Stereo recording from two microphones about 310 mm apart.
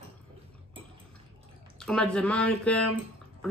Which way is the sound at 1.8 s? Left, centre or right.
Centre.